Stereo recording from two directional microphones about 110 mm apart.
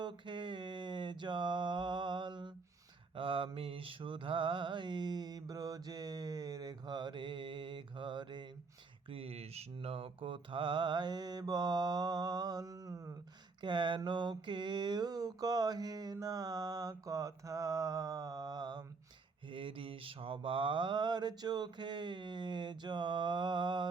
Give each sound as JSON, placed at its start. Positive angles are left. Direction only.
{"t": 0.0, "sound": "mantra", "side_deg": -45}
{"t": 9.0, "sound": "mantra", "side_deg": -60}
{"t": 13.6, "sound": "mantra", "side_deg": -45}
{"t": 19.5, "sound": "mantra", "side_deg": -50}